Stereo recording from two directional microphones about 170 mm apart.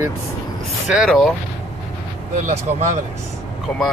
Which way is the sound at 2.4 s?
45° right (ahead or behind).